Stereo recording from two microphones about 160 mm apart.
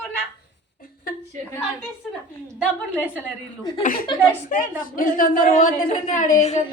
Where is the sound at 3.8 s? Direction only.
60° left (ahead or behind).